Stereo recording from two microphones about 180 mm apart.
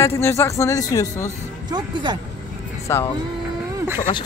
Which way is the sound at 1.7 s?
25° right (ahead or behind).